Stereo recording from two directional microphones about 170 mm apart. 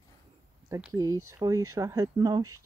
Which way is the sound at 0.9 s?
20° right (ahead or behind).